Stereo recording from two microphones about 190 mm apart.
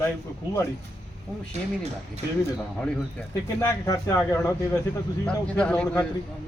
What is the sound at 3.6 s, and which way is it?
A man's voice, 15° left (ahead or behind).